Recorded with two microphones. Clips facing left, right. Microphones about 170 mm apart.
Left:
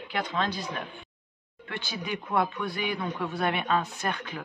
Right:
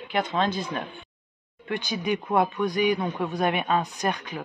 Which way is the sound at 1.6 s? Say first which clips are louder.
Right 7 dB; 15° right (ahead or behind).